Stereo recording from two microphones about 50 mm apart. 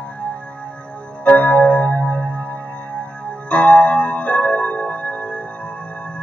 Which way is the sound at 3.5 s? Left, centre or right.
Left.